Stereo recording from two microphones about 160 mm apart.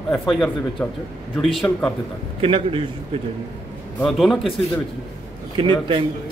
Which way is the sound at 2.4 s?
35° right (ahead or behind).